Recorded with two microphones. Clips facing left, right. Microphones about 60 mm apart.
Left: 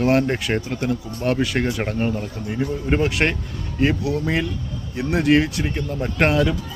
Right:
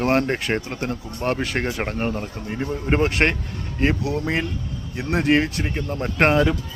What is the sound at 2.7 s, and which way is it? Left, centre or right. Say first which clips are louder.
Speech: right 1 dB; right.